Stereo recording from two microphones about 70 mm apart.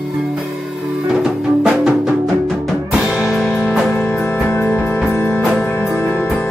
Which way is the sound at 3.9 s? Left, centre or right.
Left.